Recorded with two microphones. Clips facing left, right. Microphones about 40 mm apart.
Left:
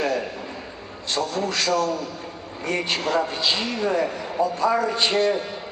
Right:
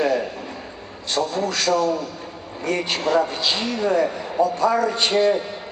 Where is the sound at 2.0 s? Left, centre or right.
Centre.